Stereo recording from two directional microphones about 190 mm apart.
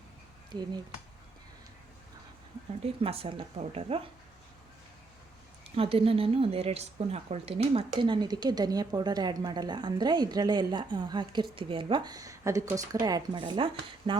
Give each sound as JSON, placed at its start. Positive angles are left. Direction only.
{"t": 3.0, "sound": "speech", "side_deg": -30}
{"t": 5.7, "sound": "speech", "side_deg": -30}